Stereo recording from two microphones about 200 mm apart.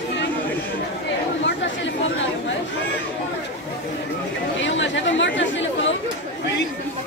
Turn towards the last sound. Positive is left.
turn(degrees=65)  # may be behind; listen again after turning